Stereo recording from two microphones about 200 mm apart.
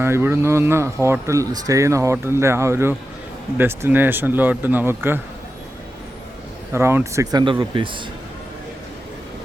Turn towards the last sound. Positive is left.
turn(degrees=-25)  # may be behind; listen again after turning